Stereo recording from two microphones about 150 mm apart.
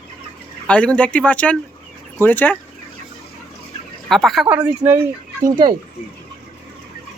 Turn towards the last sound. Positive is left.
turn(degrees=-25)  # may be behind; listen again after turning